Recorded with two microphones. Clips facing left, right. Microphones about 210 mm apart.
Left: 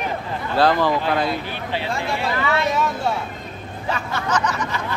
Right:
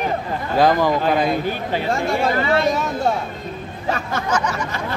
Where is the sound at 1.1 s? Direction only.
15° right (ahead or behind).